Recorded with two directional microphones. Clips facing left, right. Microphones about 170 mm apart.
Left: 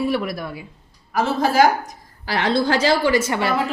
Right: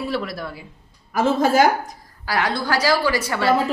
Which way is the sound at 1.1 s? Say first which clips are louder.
Right 2 dB; 50° right (ahead or behind).